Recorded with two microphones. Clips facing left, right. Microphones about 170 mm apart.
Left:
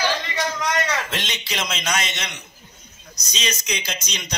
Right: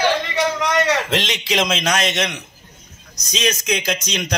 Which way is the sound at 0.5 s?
70° right (ahead or behind).